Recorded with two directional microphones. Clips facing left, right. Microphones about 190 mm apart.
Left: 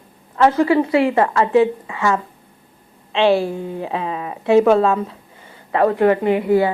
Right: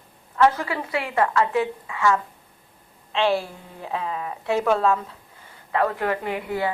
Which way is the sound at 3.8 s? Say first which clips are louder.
Right 1 dB; 15° left (ahead or behind).